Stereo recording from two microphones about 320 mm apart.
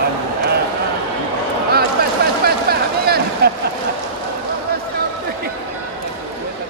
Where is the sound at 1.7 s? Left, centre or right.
Right.